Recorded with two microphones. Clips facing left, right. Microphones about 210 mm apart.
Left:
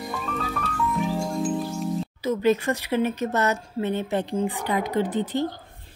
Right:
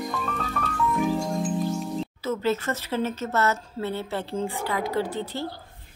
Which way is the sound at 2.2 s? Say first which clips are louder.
Left 5 dB; 15° left (ahead or behind).